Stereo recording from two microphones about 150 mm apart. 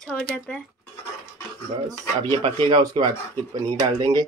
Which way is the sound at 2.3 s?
35° right (ahead or behind).